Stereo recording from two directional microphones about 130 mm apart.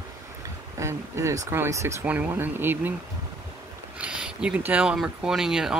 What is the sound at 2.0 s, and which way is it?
Speech, 10° right (ahead or behind).